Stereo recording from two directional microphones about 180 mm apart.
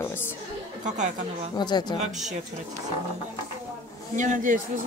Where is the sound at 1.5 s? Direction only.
25° left (ahead or behind).